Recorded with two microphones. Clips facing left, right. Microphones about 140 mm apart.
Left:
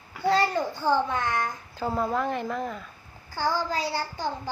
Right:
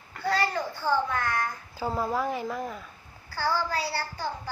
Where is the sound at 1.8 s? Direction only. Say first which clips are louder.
Left 1 dB; centre (ahead or behind).